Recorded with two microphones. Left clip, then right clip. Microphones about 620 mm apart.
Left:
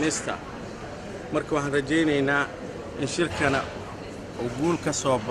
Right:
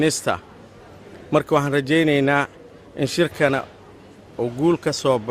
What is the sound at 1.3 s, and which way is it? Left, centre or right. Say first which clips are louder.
A man's voice: right 7 dB; right.